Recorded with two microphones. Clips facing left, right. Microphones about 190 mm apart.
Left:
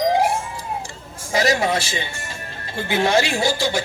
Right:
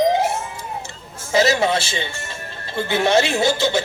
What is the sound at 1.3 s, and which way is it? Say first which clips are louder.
A man's voice: right 2 dB; 25° right (ahead or behind).